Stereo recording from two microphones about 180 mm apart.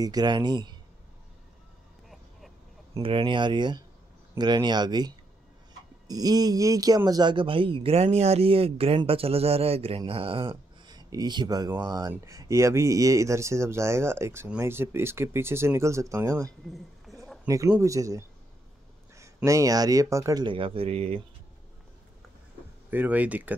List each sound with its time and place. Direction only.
0.0 s speech: 20° right (ahead or behind)
2.9 s speech: 30° right (ahead or behind)
17.1 s a sound: centre (ahead or behind)
17.5 s speech: 15° right (ahead or behind); by 21.2 s 35° right (ahead or behind)
22.8 s speech: 10° right (ahead or behind)